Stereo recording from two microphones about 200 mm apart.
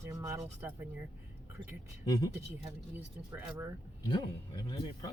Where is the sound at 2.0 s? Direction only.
20° left (ahead or behind).